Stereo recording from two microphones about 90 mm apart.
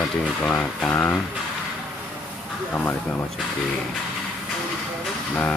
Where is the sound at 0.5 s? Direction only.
20° left (ahead or behind).